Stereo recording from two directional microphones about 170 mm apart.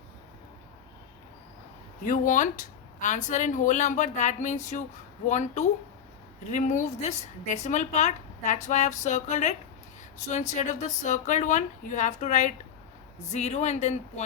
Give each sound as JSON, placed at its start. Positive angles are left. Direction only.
{"t": 2.0, "sound": "a woman's voice", "side_deg": 50}